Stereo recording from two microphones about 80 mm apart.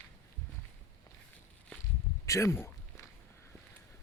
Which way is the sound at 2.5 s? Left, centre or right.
Left.